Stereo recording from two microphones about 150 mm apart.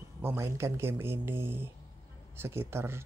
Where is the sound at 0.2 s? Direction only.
15° right (ahead or behind).